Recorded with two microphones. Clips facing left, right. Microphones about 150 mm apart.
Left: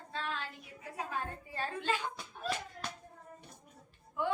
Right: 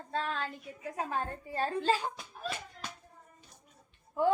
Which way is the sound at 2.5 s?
Centre (ahead or behind).